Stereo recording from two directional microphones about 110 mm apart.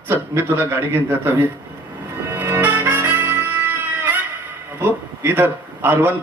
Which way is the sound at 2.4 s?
20° right (ahead or behind).